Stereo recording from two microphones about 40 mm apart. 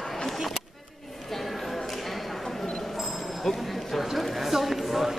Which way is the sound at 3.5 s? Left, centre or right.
Centre.